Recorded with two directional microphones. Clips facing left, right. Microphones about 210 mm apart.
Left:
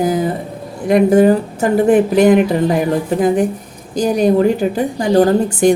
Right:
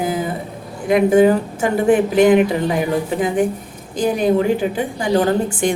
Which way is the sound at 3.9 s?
40° left (ahead or behind).